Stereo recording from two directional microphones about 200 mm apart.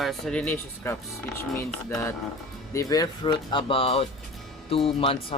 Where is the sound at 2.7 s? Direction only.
15° left (ahead or behind).